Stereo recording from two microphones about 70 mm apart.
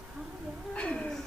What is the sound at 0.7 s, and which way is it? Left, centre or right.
Speech, centre.